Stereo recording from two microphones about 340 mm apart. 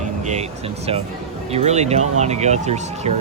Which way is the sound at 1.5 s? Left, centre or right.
Centre.